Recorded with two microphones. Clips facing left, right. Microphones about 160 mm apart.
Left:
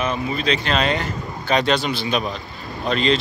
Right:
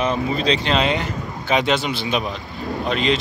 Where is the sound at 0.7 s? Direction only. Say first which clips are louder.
Right 1 dB; 20° right (ahead or behind).